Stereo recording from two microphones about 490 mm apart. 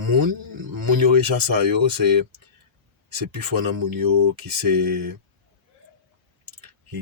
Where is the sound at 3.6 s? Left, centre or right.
Right.